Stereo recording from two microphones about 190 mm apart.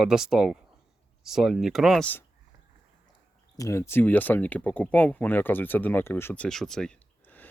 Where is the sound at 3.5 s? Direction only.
15° left (ahead or behind).